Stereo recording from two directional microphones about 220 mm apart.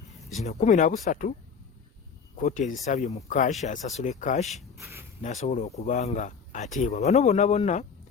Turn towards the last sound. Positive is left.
turn(degrees=30)  # may be behind; listen again after turning